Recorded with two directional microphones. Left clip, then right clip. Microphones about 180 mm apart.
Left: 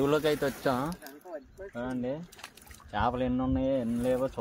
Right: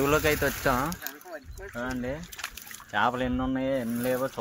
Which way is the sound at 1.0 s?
15° left (ahead or behind).